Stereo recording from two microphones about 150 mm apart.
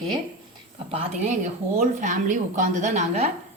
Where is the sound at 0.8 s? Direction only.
40° right (ahead or behind).